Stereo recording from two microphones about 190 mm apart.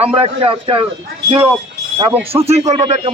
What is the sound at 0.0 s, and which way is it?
Speech, 30° right (ahead or behind).